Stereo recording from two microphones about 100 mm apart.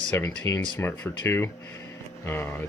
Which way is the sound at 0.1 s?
25° left (ahead or behind).